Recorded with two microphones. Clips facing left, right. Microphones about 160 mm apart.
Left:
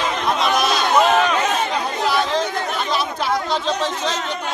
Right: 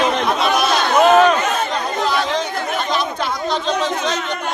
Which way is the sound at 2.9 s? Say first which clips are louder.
Even; 5° left (ahead or behind).